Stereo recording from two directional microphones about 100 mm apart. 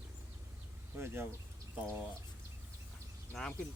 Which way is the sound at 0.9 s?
25° right (ahead or behind).